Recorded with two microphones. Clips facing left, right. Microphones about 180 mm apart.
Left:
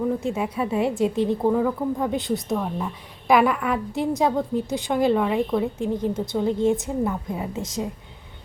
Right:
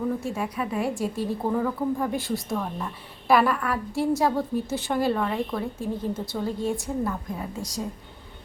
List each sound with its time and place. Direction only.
0.2 s a woman's voice: 20° left (ahead or behind)